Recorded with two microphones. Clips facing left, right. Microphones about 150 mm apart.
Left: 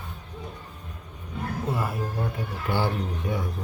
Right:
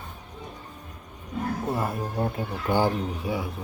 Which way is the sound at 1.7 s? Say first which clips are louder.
Right 1 dB; 25° right (ahead or behind).